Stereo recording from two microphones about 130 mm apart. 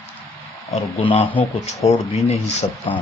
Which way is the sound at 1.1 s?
55° left (ahead or behind).